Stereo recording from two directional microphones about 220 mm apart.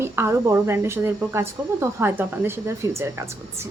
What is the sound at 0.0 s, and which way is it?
A woman's voice, 10° right (ahead or behind).